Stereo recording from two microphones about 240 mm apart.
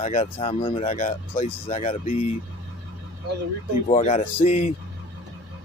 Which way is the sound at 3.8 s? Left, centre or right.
Left.